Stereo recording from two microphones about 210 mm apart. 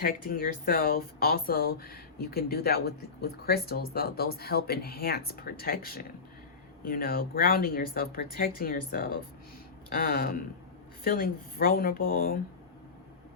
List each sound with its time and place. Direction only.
0.0 s speech: 45° left (ahead or behind)